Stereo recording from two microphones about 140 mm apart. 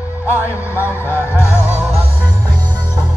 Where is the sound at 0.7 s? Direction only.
15° left (ahead or behind).